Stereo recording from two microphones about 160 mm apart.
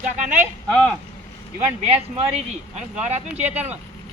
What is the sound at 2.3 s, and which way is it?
Speech, 45° right (ahead or behind).